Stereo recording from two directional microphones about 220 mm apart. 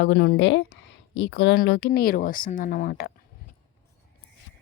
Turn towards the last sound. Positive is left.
turn(degrees=40)  # may be behind; listen again after turning